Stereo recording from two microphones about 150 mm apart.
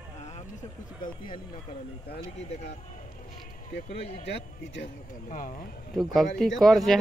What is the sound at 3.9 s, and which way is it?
Speech, 45° left (ahead or behind).